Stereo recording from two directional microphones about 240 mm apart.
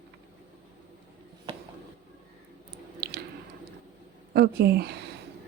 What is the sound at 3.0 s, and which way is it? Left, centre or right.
Chewing, right.